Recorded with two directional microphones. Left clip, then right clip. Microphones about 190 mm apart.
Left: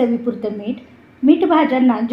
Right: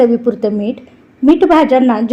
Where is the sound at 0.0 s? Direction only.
50° right (ahead or behind).